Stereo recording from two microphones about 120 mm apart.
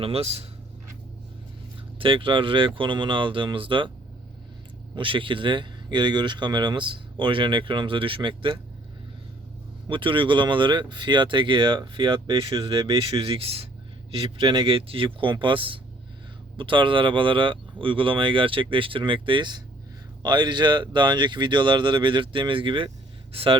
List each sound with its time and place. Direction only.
0.0 s speech: 55° right (ahead or behind)
2.0 s speech: 45° right (ahead or behind)
4.9 s speech: 45° right (ahead or behind)
9.9 s speech: 45° right (ahead or behind)
14.2 s speech: 40° right (ahead or behind)